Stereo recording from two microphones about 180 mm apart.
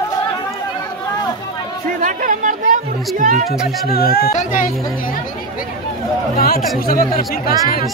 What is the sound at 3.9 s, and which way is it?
Speech, 60° left (ahead or behind).